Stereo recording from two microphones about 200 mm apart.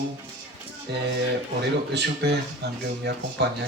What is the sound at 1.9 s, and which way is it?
Speech, 55° right (ahead or behind).